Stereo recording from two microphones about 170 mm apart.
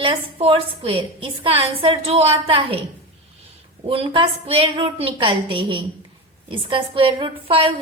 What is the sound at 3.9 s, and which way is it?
A woman's voice, 30° right (ahead or behind).